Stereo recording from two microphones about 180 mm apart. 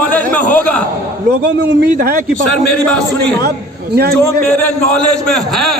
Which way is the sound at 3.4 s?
60° right (ahead or behind).